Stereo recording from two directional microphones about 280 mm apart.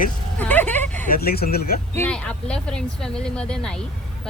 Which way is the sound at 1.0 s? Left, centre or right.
Left.